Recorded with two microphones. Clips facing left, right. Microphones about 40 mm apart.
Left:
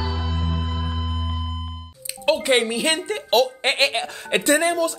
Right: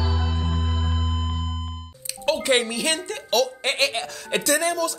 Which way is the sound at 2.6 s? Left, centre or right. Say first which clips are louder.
Left 3 dB; left.